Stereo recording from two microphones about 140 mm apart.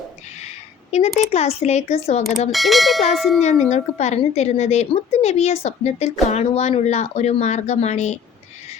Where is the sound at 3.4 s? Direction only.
55° left (ahead or behind).